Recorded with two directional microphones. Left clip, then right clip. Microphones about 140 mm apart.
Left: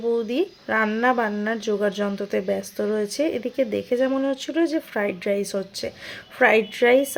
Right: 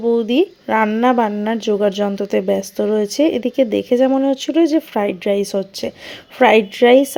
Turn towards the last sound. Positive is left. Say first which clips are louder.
# right 7 dB
turn(degrees=-35)  # may be behind; listen again after turning